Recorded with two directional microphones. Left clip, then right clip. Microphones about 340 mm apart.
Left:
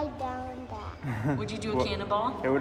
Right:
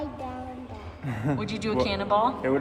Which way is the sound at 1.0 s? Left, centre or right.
Centre.